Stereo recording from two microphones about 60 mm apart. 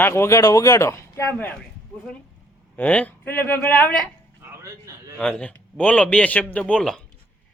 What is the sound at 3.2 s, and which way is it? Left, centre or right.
Speech, left.